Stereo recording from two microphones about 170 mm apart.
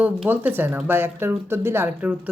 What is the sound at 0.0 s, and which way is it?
Speech, 10° right (ahead or behind).